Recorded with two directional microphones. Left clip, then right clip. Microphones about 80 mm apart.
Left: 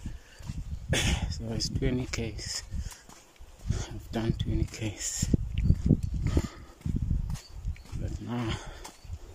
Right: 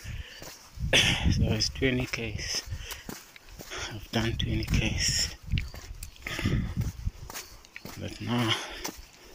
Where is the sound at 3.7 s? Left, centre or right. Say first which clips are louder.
Right 5 dB; left.